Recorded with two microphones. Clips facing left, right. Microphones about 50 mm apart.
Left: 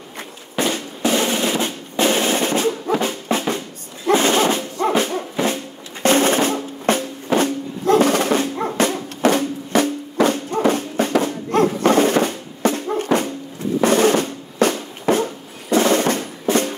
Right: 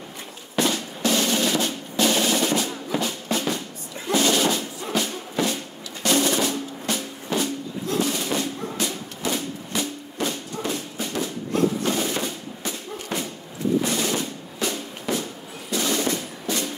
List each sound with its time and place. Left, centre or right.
0.6 s drum: left
4.1 s music: left
6.0 s music: left
13.8 s drum: left
16.4 s music: left